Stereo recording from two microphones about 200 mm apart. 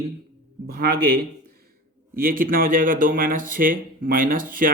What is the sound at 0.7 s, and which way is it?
Speech, 50° right (ahead or behind).